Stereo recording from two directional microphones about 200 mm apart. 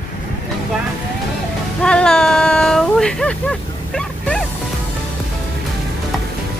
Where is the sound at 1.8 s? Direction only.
5° left (ahead or behind).